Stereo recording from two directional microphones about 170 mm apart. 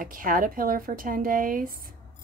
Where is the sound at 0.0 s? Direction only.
55° right (ahead or behind).